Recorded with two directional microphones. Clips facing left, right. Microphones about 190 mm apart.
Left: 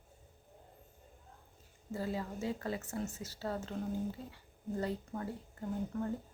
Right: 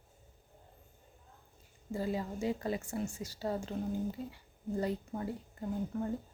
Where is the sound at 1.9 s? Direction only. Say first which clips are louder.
Right 3 dB; 15° right (ahead or behind).